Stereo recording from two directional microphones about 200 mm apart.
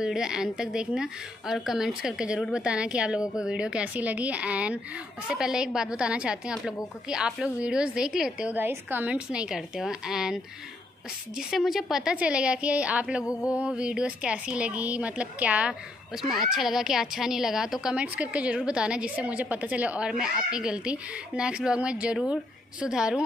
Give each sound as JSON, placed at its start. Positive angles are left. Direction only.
{"t": 0.0, "sound": "a woman's voice", "side_deg": -5}
{"t": 13.2, "sound": "mantra", "side_deg": 15}
{"t": 13.5, "sound": "a woman's voice", "side_deg": -5}